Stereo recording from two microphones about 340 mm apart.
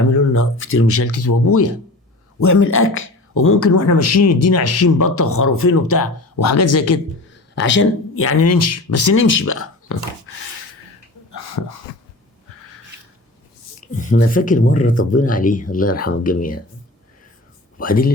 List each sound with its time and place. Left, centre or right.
0.1 s speech: left
7.5 s speech: left
11.3 s a sound: left
13.8 s speech: left
17.7 s speech: left